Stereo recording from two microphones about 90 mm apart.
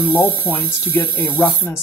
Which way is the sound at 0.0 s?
20° left (ahead or behind).